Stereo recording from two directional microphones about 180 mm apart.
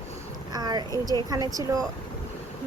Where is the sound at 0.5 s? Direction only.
20° right (ahead or behind).